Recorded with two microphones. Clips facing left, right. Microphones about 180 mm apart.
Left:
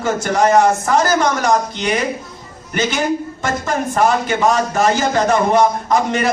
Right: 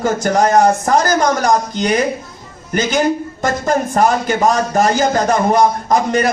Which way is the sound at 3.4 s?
40° right (ahead or behind).